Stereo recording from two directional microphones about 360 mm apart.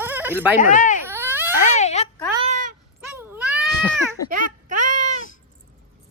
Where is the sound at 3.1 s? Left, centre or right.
Centre.